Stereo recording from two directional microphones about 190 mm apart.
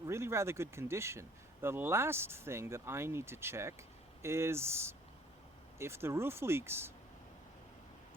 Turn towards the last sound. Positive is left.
turn(degrees=-15)  # may be behind; listen again after turning